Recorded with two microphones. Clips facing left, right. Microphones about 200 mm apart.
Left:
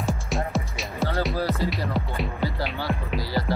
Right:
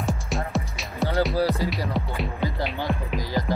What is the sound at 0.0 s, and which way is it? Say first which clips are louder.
Music: left 1 dB; centre (ahead or behind).